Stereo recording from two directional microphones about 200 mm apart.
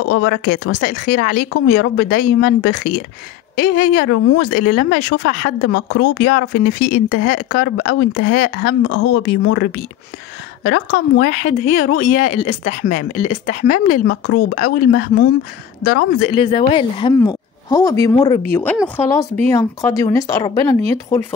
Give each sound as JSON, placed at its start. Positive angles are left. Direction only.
{"t": 0.1, "sound": "speech", "side_deg": 60}
{"t": 9.2, "sound": "speech", "side_deg": 75}
{"t": 10.6, "sound": "speech", "side_deg": 55}
{"t": 16.3, "sound": "speech", "side_deg": 25}